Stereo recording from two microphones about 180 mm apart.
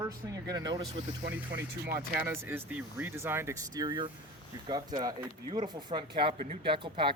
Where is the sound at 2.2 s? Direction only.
10° right (ahead or behind).